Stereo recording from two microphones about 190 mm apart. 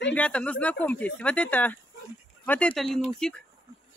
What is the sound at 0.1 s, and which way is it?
Speech, 5° left (ahead or behind).